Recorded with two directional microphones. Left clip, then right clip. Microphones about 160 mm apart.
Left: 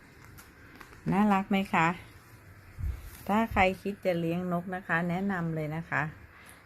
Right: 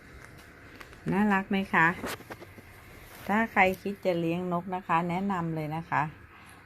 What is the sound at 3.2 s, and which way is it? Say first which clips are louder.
A woman's voice: right 2 dB; 15° left (ahead or behind).